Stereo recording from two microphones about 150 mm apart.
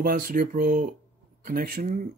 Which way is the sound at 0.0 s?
80° right.